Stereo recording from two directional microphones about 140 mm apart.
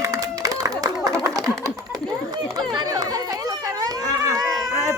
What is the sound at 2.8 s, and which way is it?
Chatter, 25° right (ahead or behind).